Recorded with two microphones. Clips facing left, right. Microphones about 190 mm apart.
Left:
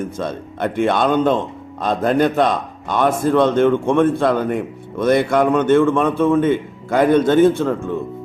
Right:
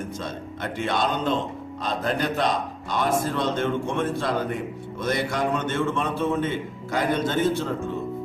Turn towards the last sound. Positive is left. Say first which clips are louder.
# left 10 dB
turn(degrees=55)  # may be behind; listen again after turning